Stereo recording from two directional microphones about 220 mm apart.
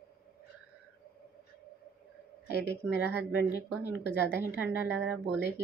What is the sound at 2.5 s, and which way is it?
A woman's voice, 45° left (ahead or behind).